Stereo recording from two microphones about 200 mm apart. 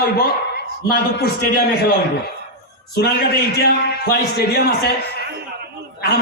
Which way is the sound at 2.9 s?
55° left (ahead or behind).